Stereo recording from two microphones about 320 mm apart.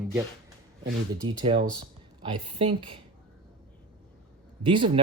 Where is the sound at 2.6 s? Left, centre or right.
Centre.